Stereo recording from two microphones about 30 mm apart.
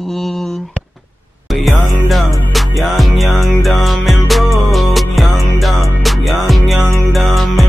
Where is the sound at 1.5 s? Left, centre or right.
Centre.